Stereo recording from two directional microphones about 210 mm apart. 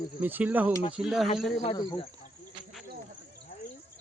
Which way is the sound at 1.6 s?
20° left (ahead or behind).